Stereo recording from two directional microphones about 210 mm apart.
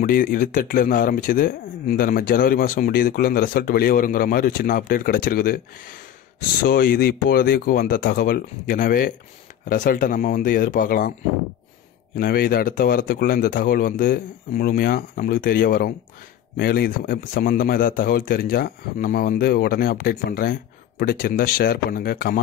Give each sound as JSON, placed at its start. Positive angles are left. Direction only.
{"t": 0.0, "sound": "speech", "side_deg": 40}
{"t": 12.2, "sound": "speech", "side_deg": 45}